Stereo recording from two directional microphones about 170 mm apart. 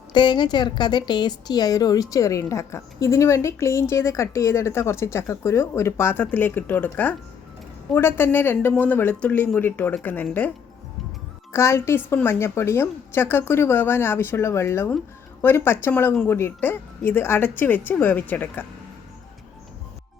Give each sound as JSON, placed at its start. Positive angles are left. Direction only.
{"t": 0.1, "sound": "a woman's voice", "side_deg": 25}
{"t": 11.5, "sound": "a woman's voice", "side_deg": 15}